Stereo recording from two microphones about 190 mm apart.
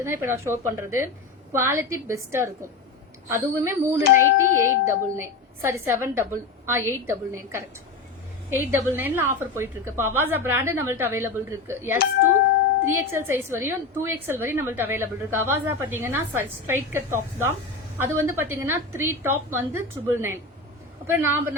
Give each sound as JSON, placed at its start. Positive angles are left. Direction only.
{"t": 0.0, "sound": "a woman's voice", "side_deg": -15}
{"t": 4.0, "sound": "speech", "side_deg": 45}
{"t": 4.6, "sound": "a woman's voice", "side_deg": -15}